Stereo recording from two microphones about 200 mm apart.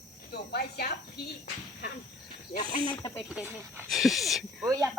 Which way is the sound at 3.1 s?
5° left (ahead or behind).